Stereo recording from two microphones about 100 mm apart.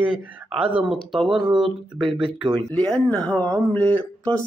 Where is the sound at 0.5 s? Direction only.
10° right (ahead or behind).